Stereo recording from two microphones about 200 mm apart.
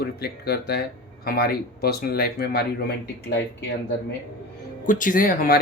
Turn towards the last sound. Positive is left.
turn(degrees=45)  # may be behind; listen again after turning